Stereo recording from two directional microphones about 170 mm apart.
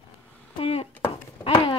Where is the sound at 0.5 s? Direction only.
35° left (ahead or behind).